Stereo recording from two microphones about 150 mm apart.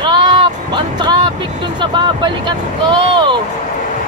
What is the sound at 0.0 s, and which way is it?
Music, 30° right (ahead or behind).